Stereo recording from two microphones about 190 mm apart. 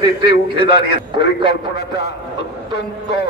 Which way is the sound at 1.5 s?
65° left (ahead or behind).